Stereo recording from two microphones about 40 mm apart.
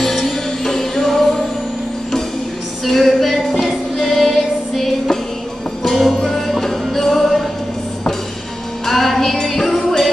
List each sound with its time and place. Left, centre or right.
0.0 s music: centre
2.8 s music: centre
8.8 s music: centre